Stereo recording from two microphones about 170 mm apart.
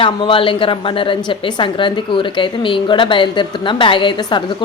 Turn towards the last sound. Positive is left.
turn(degrees=30)  # may be behind; listen again after turning